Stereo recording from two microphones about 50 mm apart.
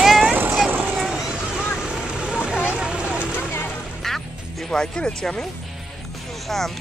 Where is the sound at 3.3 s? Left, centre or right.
Left.